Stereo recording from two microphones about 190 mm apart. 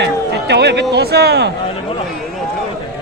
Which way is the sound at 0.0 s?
60° right (ahead or behind).